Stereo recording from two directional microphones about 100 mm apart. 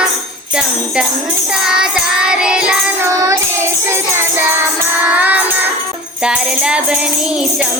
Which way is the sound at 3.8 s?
25° right (ahead or behind).